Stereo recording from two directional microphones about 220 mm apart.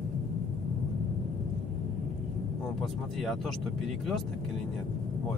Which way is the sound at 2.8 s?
Centre (ahead or behind).